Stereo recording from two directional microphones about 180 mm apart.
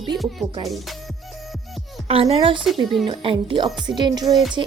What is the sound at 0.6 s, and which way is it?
Speech, centre (ahead or behind).